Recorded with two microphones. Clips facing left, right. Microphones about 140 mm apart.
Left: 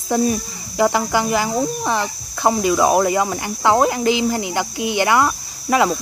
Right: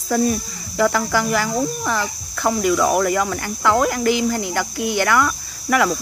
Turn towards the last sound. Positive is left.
turn(degrees=20)  # may be behind; listen again after turning